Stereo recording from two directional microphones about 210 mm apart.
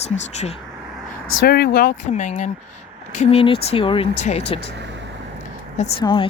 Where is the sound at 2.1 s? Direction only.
35° left (ahead or behind).